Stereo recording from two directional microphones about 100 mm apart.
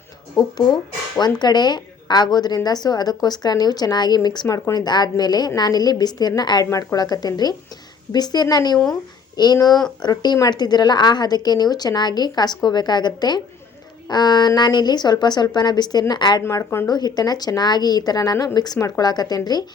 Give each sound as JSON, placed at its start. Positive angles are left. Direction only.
{"t": 0.3, "sound": "a woman's voice", "side_deg": 45}
{"t": 16.4, "sound": "speech", "side_deg": 30}
{"t": 16.9, "sound": "speech", "side_deg": 40}